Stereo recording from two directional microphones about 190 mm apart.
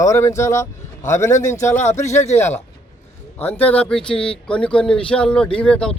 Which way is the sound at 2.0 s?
35° left (ahead or behind).